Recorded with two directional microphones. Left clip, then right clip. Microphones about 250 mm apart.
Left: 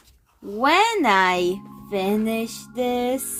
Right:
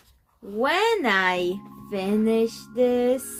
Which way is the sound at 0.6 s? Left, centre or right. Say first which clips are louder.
Left 4 dB; left.